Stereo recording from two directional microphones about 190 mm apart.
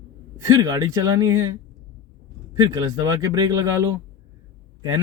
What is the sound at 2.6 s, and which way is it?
Speech, 20° right (ahead or behind).